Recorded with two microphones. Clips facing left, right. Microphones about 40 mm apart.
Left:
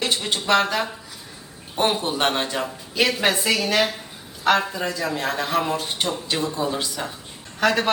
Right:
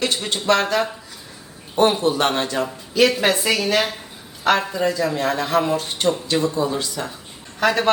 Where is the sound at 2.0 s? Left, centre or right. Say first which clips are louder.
Right 3 dB; left.